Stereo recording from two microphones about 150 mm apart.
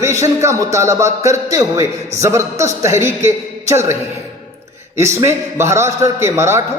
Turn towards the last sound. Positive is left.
turn(degrees=-15)  # may be behind; listen again after turning